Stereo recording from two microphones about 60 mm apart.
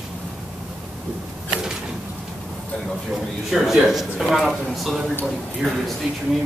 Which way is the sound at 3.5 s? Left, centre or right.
Centre.